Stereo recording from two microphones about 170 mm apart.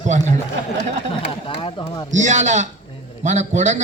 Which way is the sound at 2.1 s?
45° right (ahead or behind).